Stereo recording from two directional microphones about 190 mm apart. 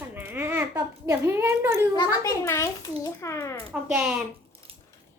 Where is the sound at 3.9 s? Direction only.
5° right (ahead or behind).